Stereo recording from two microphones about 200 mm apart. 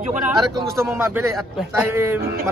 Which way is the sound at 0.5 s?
10° right (ahead or behind).